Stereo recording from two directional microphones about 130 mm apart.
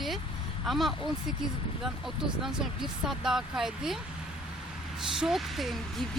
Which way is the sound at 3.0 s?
5° right (ahead or behind).